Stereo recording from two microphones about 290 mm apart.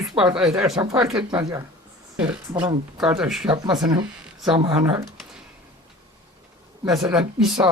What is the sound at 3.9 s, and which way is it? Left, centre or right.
Speech, centre.